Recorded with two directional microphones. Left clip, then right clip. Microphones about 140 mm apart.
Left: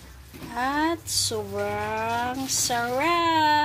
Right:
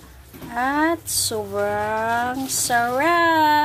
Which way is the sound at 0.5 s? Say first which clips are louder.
Right 5 dB; 15° right (ahead or behind).